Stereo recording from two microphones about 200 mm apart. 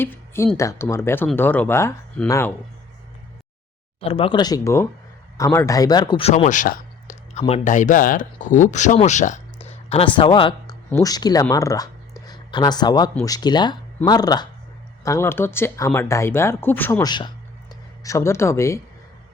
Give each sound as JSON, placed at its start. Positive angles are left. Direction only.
{"t": 0.0, "sound": "speech", "side_deg": 10}
{"t": 4.0, "sound": "speech", "side_deg": 30}